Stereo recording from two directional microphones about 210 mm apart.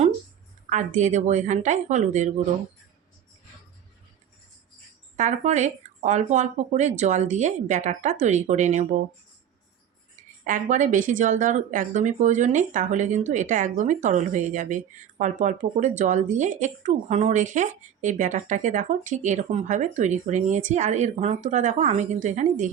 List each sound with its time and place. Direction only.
0.7 s speech: 35° right (ahead or behind)
5.1 s speech: 35° right (ahead or behind)
10.2 s speech: 40° right (ahead or behind)